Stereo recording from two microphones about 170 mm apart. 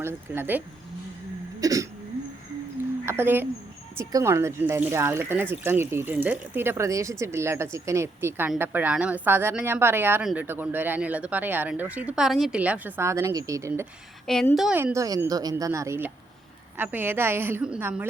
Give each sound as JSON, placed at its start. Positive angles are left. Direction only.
{"t": 0.0, "sound": "speech", "side_deg": -15}
{"t": 1.6, "sound": "a woman's voice", "side_deg": -20}
{"t": 3.1, "sound": "speech", "side_deg": -15}
{"t": 14.5, "sound": "a woman's voice", "side_deg": 0}
{"t": 14.8, "sound": "a woman's voice", "side_deg": -15}